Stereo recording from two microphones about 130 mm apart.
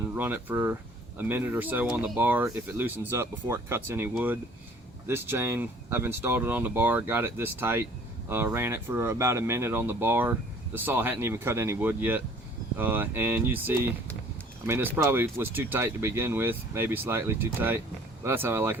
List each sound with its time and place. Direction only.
0.0 s speech: 15° right (ahead or behind)
14.9 s speech: 15° right (ahead or behind)